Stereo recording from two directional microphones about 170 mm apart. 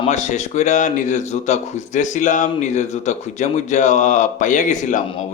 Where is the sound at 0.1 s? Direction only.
45° left (ahead or behind).